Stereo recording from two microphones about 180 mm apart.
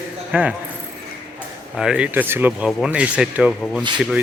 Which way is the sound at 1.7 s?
5° right (ahead or behind).